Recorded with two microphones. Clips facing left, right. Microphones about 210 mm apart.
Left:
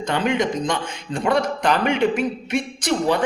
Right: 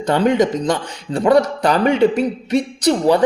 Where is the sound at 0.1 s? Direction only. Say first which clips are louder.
Right 6 dB; 40° right (ahead or behind).